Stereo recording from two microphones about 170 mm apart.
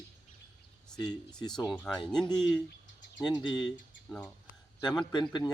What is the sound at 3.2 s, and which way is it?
Speech, 25° left (ahead or behind).